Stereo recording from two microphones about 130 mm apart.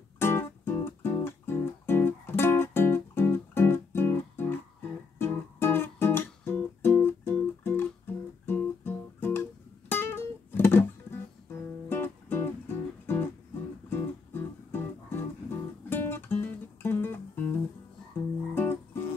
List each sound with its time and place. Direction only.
0.2 s music: 20° left (ahead or behind)
18.5 s music: 20° left (ahead or behind)